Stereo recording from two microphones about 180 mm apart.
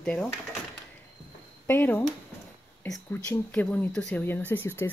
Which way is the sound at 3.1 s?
10° left (ahead or behind).